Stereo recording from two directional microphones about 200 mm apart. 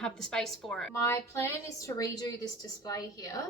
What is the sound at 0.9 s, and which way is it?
A woman's voice, 15° left (ahead or behind).